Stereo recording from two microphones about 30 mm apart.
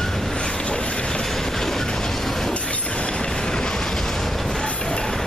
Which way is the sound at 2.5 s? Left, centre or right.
Left.